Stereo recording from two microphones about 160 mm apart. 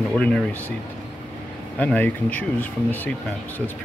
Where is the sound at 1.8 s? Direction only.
10° left (ahead or behind).